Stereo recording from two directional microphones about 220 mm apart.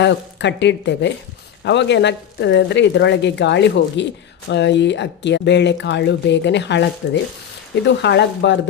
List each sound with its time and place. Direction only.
0.0 s speech: 50° left (ahead or behind)